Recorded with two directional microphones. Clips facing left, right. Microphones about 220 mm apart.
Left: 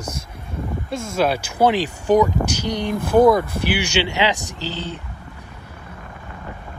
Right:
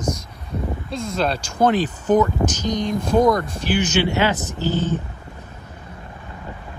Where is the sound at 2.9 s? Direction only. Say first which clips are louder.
Left 3 dB; 55° left (ahead or behind).